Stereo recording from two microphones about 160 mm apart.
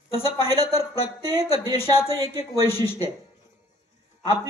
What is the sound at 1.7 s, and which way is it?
Speech, 35° left (ahead or behind).